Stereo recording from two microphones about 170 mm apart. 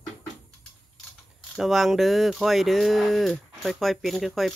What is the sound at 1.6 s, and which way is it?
Speech, centre (ahead or behind).